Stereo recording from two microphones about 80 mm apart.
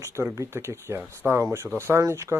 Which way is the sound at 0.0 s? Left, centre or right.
Right.